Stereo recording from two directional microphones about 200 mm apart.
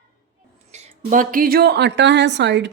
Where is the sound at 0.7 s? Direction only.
35° right (ahead or behind).